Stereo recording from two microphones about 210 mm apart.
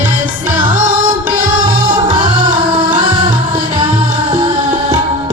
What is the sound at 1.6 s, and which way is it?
Music, 20° right (ahead or behind).